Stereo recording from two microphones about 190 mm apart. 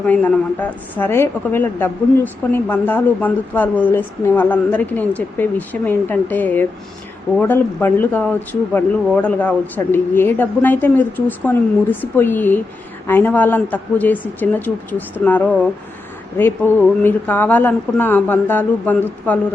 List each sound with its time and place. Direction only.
0.0 s a man's voice: 5° left (ahead or behind)